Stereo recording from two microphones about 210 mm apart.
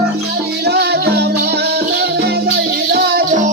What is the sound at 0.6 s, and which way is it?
Music, 50° right (ahead or behind).